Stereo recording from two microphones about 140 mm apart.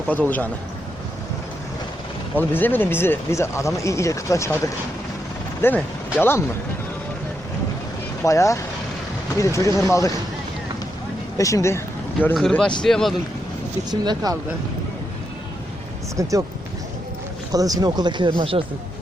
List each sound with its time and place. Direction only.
0.1 s speech: 10° left (ahead or behind)
2.3 s speech: 15° left (ahead or behind)
8.2 s speech: 20° left (ahead or behind)
11.3 s speech: 25° left (ahead or behind)
12.3 s speech: 5° left (ahead or behind)
13.9 s speech: 30° right (ahead or behind)
17.5 s speech: 25° right (ahead or behind)